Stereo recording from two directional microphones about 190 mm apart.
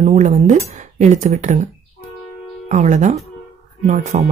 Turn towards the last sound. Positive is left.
turn(degrees=-35)  # may be behind; listen again after turning